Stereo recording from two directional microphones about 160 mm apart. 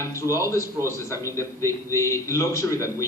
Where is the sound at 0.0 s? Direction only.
20° left (ahead or behind).